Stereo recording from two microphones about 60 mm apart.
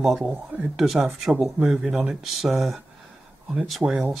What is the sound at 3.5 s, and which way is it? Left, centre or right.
Speech, centre.